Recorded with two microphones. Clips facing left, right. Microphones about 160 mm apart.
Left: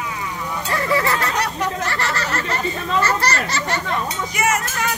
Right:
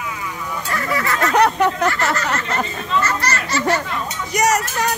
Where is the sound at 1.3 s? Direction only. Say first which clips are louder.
Right 8 dB; 60° right (ahead or behind).